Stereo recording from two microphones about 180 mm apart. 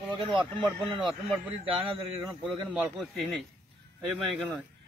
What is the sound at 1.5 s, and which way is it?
Speech, 30° right (ahead or behind).